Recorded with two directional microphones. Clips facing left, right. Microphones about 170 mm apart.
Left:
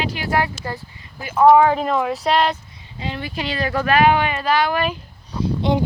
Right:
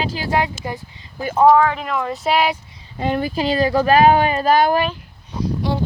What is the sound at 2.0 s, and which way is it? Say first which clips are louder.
Speech: even; centre (ahead or behind).